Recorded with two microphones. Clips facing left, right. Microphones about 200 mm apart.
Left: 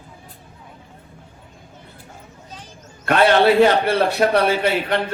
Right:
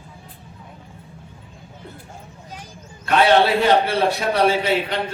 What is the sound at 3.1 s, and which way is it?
A man's voice, 55° left (ahead or behind).